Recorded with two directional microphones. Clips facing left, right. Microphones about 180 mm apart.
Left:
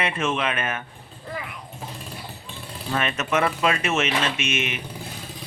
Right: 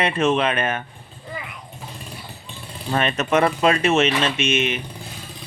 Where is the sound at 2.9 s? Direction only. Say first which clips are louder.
Right 4 dB; 35° right (ahead or behind).